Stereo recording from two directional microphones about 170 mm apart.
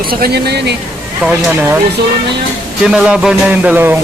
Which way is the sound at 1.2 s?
10° right (ahead or behind).